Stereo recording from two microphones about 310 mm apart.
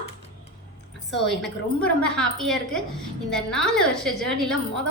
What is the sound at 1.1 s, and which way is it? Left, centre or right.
A woman's voice, centre.